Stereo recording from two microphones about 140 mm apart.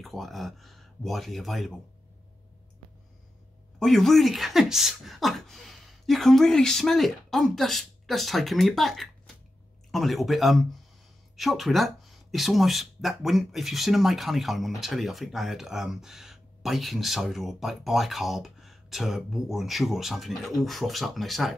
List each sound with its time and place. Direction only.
0.0 s speech: centre (ahead or behind)
3.8 s speech: centre (ahead or behind)